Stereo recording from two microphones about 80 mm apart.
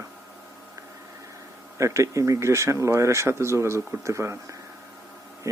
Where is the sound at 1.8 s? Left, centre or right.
Right.